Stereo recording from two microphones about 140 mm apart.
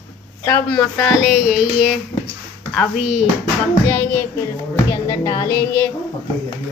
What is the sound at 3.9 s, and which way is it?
Speech, 15° left (ahead or behind).